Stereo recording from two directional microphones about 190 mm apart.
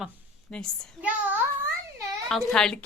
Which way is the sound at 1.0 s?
10° right (ahead or behind).